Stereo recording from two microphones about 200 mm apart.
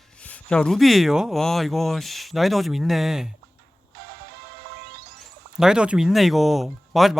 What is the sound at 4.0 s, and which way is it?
Music, 50° right (ahead or behind).